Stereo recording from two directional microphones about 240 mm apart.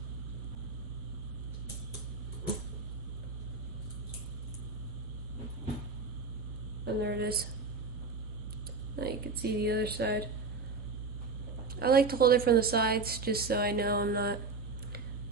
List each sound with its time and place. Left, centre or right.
6.8 s a woman's voice: right
9.0 s speech: right
11.8 s a woman's voice: right